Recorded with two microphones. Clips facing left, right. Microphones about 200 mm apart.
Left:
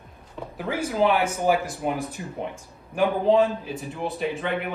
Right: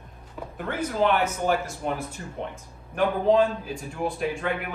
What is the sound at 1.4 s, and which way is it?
A man's voice, 15° left (ahead or behind).